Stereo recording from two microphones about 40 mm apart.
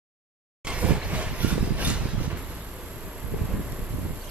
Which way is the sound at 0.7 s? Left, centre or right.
Right.